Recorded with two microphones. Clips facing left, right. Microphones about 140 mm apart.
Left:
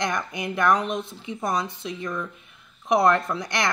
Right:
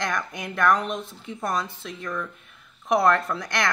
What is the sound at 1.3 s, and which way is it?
Speech, 15° left (ahead or behind).